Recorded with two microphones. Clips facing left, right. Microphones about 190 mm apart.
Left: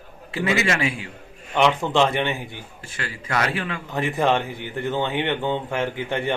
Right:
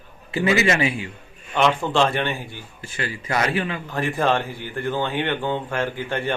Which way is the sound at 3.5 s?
5° right (ahead or behind).